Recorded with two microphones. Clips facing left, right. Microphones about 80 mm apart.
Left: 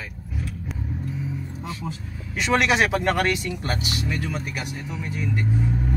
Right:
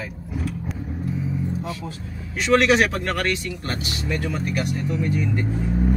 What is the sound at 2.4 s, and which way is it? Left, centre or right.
Speech, centre.